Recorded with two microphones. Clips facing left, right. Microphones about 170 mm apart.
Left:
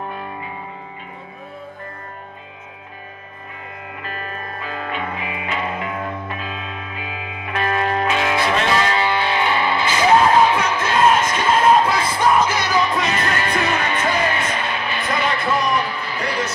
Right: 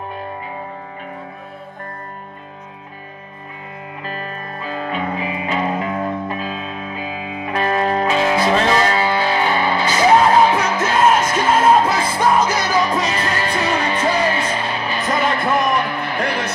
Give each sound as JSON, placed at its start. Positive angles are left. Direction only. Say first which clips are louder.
{"t": 4.0, "sound": "music", "louder": "right 2 dB", "side_deg": -35}